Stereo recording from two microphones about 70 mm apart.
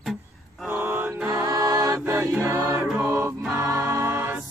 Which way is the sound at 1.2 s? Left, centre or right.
Right.